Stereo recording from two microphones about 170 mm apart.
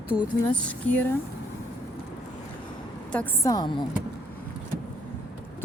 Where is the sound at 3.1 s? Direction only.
10° left (ahead or behind); by 3.8 s 25° left (ahead or behind).